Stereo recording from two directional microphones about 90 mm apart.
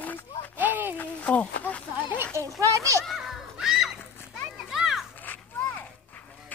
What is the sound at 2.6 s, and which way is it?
Speech, 35° right (ahead or behind).